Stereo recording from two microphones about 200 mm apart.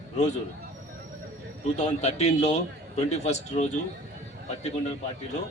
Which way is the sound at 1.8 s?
35° left (ahead or behind).